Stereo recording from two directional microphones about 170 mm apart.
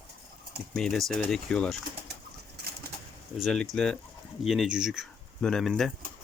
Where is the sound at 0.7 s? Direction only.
Centre (ahead or behind).